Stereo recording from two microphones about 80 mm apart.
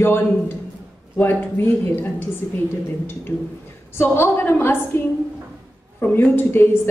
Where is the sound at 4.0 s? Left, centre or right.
Left.